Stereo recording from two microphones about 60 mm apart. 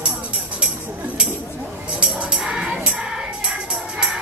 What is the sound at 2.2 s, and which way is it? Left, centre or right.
Music, centre.